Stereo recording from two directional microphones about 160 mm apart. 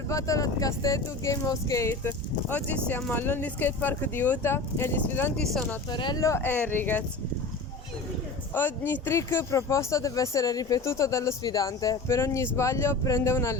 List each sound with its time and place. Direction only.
0.1 s speech: 20° left (ahead or behind)
5.9 s speech: 25° left (ahead or behind); by 7.0 s 10° left (ahead or behind)
8.5 s speech: 15° left (ahead or behind)